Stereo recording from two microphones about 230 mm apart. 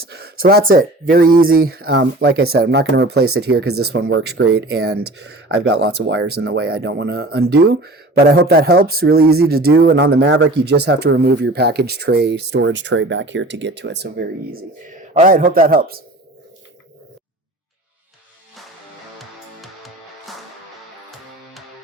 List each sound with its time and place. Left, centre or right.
0.0 s a man's voice: right
19.2 s music: centre